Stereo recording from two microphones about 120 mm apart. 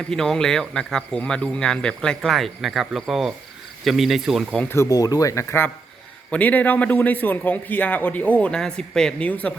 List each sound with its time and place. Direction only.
0.1 s speech: 5° left (ahead or behind)
4.7 s a man's voice: 25° left (ahead or behind); by 9.5 s 10° left (ahead or behind)